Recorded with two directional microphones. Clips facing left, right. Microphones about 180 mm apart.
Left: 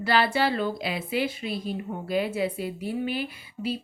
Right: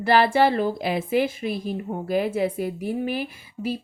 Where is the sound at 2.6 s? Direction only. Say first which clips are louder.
Right 3 dB; 50° right (ahead or behind).